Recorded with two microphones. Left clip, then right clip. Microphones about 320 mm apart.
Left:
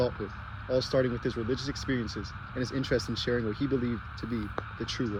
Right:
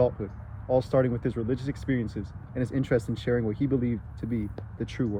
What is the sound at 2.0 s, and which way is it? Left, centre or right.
Speech, right.